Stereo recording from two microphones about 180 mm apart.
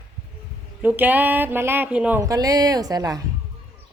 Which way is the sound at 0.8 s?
10° right (ahead or behind).